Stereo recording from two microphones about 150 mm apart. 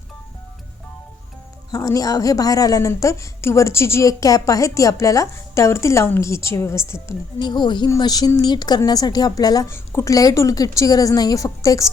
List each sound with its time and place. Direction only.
1.7 s a woman's voice: 25° left (ahead or behind)
7.3 s a woman's voice: 30° left (ahead or behind)